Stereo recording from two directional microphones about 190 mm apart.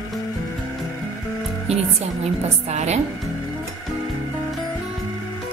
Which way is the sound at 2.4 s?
35° right (ahead or behind).